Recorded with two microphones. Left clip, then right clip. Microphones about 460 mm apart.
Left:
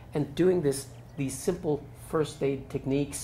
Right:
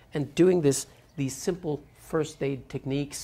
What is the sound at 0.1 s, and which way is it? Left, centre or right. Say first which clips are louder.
Speech: right 3 dB; right.